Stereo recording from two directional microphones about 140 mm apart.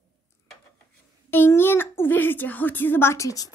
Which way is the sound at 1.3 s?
15° left (ahead or behind).